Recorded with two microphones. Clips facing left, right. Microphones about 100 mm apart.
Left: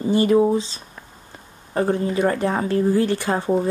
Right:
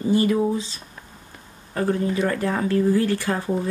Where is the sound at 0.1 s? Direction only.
25° left (ahead or behind).